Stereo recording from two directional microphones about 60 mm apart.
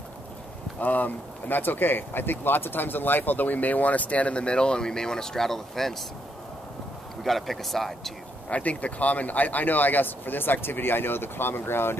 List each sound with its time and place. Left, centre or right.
0.7 s speech: left; by 5.9 s centre
7.2 s speech: centre
8.5 s speech: left